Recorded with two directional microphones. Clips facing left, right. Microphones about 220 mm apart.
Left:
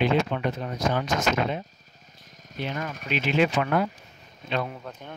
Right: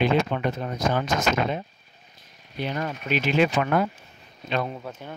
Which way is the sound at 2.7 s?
45° right (ahead or behind).